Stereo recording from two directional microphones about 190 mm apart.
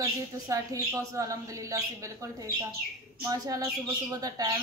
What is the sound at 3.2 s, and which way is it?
Speech, 20° right (ahead or behind).